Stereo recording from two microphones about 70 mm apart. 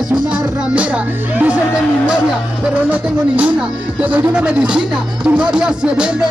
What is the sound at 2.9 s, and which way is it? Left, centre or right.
Music, right.